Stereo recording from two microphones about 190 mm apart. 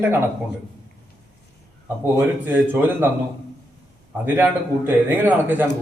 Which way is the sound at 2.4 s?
10° right (ahead or behind).